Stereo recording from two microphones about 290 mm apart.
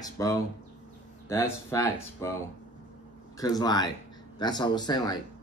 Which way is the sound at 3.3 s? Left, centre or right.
Centre.